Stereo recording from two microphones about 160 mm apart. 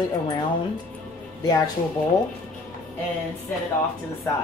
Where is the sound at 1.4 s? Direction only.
25° left (ahead or behind).